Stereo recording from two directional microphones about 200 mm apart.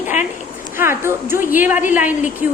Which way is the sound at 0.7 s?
10° right (ahead or behind).